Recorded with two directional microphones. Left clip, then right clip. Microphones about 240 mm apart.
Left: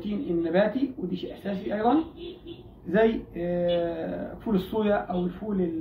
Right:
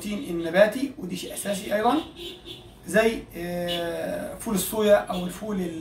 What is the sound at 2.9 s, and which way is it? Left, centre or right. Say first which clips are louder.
Speech: right 1 dB; centre.